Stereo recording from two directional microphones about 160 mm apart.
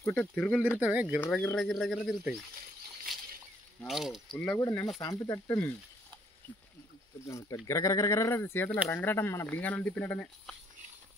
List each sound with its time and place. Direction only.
0.0 s speech: 10° left (ahead or behind)
0.7 s speech: 10° right (ahead or behind)
1.2 s speech: 10° left (ahead or behind)
3.8 s speech: centre (ahead or behind)
4.6 s speech: 20° left (ahead or behind)
7.2 s speech: 20° left (ahead or behind)